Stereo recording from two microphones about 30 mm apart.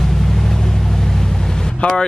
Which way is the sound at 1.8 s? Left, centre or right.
Left.